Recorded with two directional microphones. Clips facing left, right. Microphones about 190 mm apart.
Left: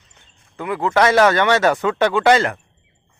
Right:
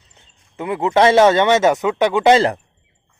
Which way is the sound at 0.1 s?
25° right (ahead or behind).